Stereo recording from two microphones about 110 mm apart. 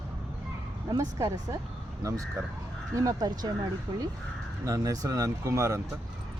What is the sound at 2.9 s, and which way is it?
Speech, 35° right (ahead or behind).